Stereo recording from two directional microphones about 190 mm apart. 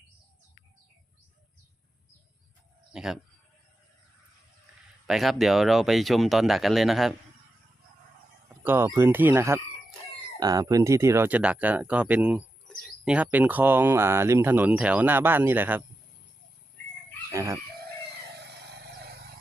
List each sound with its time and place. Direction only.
2.9 s speech: 5° right (ahead or behind)
5.0 s speech: centre (ahead or behind)
8.6 s speech: 10° right (ahead or behind)
17.3 s chicken: 15° right (ahead or behind)
18.3 s vehicle: 60° right (ahead or behind)